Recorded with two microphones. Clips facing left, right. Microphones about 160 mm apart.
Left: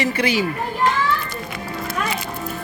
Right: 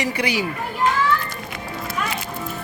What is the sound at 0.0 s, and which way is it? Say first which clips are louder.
Speech: left 3 dB; 15° right (ahead or behind).